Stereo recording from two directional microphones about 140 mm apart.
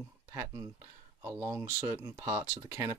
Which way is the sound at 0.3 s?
20° right (ahead or behind).